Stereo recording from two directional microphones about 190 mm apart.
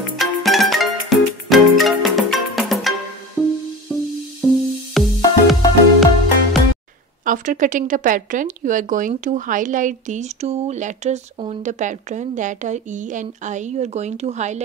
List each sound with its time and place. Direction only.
0.2 s music: centre (ahead or behind)
7.2 s speech: 40° right (ahead or behind)